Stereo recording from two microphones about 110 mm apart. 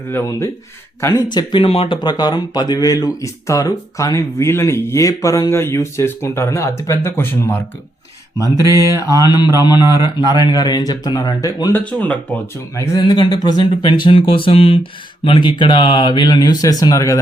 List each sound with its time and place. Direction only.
0.1 s speech: 25° left (ahead or behind)
1.3 s speech: 40° left (ahead or behind)
1.6 s speech: 60° left (ahead or behind)
2.0 s speech: 40° left (ahead or behind); by 7.6 s 20° left (ahead or behind)
8.4 s mantra: 30° right (ahead or behind)
9.2 s speech: 40° left (ahead or behind)
9.8 s a man's voice: 25° right (ahead or behind)
10.5 s speech: 40° left (ahead or behind)
11.7 s speech: 10° left (ahead or behind)
12.7 s speech: 25° left (ahead or behind)
13.1 s speech: 40° left (ahead or behind); by 14.8 s 60° left (ahead or behind)
15.2 s speech: 50° left (ahead or behind); by 17.2 s 30° left (ahead or behind)